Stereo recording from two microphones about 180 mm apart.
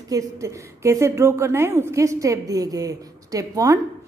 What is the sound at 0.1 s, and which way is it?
A woman's voice, 15° right (ahead or behind).